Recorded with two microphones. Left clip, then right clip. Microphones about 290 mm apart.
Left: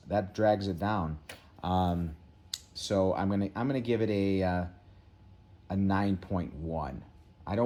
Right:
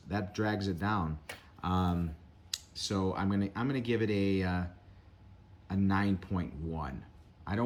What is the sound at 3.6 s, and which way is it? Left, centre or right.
Speech, centre.